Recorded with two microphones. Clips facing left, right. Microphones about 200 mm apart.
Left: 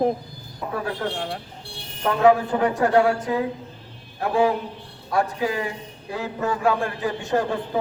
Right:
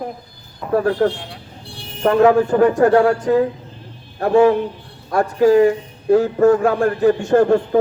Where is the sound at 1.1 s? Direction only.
50° left (ahead or behind).